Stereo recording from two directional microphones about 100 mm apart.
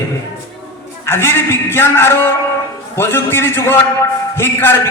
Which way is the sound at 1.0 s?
25° left (ahead or behind).